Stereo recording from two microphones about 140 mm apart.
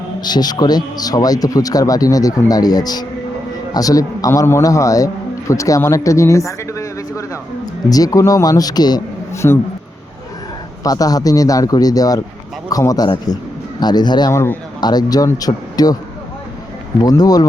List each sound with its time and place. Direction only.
0.2 s a man's voice: 30° left (ahead or behind)
10.8 s a man's voice: 25° left (ahead or behind)
14.3 s a man's voice: 15° left (ahead or behind)
14.8 s a man's voice: 30° left (ahead or behind)
17.0 s a man's voice: 25° left (ahead or behind)